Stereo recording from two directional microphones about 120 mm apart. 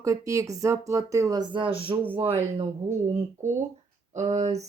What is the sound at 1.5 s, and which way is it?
Speech, 50° right (ahead or behind).